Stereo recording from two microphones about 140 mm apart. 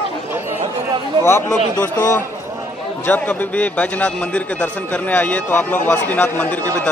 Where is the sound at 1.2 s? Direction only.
20° left (ahead or behind).